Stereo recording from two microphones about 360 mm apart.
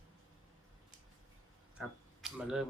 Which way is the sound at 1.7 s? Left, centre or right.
Centre.